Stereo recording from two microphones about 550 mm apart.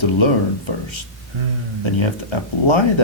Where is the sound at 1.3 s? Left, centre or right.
Right.